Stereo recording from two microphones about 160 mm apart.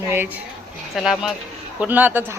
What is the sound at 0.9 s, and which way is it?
Speech, centre (ahead or behind).